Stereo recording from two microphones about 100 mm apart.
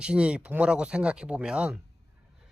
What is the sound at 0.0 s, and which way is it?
Speech, 10° right (ahead or behind).